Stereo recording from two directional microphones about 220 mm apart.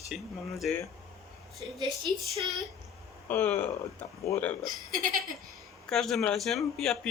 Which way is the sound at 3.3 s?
10° left (ahead or behind).